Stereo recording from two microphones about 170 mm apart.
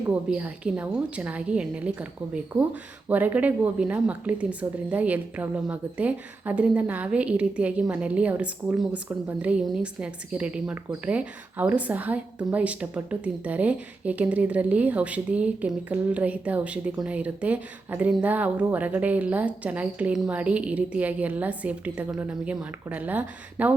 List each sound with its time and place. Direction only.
0.0 s a woman's voice: 10° right (ahead or behind)